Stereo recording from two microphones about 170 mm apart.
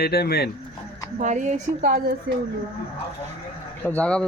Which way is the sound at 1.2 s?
45° right (ahead or behind).